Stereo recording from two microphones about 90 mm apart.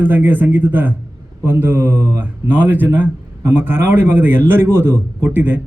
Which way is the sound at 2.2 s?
20° right (ahead or behind).